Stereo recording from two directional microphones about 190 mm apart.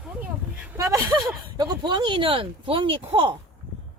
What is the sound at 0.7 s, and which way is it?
Speech, 20° right (ahead or behind).